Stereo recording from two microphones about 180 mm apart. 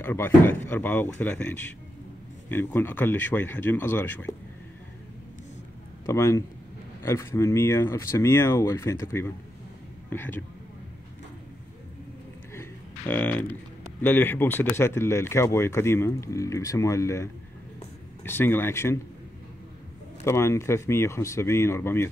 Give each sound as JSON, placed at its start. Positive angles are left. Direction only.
{"t": 0.0, "sound": "speech", "side_deg": 10}
{"t": 6.0, "sound": "speech", "side_deg": 15}
{"t": 12.5, "sound": "a sound", "side_deg": 10}
{"t": 14.0, "sound": "speech", "side_deg": 10}
{"t": 20.2, "sound": "speech", "side_deg": 15}